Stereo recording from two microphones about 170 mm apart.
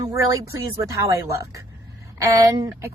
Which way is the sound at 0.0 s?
20° right (ahead or behind).